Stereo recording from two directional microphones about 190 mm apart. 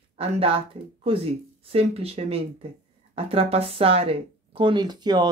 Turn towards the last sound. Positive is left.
turn(degrees=-20)  # may be behind; listen again after turning